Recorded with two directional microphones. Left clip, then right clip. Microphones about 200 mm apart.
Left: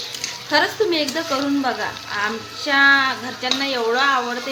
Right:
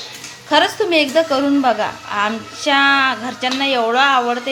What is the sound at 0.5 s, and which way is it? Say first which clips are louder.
Speech: right 4 dB; 20° right (ahead or behind).